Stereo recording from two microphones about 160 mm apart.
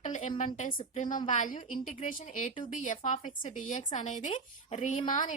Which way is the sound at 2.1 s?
55° left (ahead or behind).